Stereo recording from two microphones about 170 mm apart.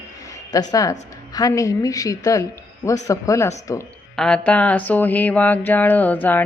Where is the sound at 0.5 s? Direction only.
20° left (ahead or behind).